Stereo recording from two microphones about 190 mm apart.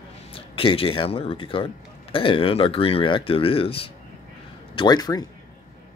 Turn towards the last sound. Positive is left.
turn(degrees=20)  # may be behind; listen again after turning